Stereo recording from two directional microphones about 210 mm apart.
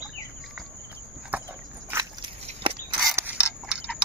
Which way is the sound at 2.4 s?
25° right (ahead or behind).